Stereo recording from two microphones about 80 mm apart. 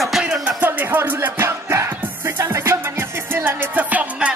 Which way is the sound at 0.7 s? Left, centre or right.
Right.